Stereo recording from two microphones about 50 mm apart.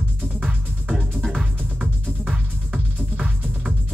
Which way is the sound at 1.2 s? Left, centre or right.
Centre.